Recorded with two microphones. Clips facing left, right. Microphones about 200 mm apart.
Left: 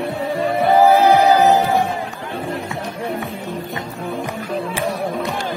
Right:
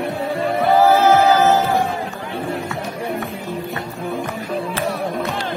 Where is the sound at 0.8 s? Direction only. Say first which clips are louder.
Left 1 dB; 15° left (ahead or behind).